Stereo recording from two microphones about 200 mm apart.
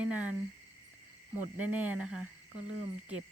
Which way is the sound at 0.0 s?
5° right (ahead or behind).